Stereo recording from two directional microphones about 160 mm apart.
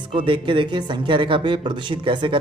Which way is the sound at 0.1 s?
30° right (ahead or behind).